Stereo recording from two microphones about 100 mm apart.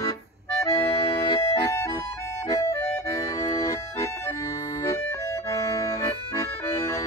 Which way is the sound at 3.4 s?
35° left (ahead or behind).